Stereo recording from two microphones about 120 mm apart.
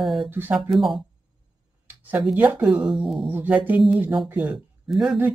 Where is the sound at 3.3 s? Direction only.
15° right (ahead or behind).